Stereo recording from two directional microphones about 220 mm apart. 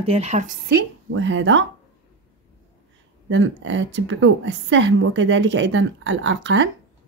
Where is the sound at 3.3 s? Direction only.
60° right (ahead or behind).